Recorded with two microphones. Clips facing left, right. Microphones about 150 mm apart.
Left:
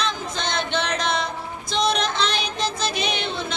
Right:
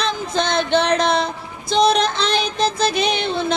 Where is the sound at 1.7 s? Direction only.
35° right (ahead or behind).